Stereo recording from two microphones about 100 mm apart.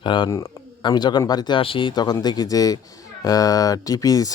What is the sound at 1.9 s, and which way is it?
Speech, 45° left (ahead or behind).